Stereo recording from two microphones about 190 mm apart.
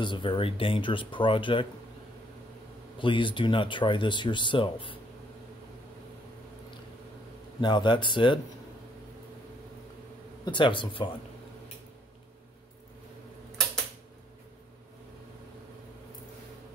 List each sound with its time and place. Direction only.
0.0 s speech: 25° left (ahead or behind)
3.0 s speech: 25° left (ahead or behind)
7.6 s speech: 25° left (ahead or behind)
10.4 s speech: 25° left (ahead or behind)